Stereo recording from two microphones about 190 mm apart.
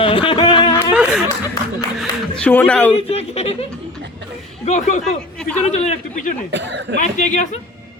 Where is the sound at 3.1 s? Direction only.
30° left (ahead or behind).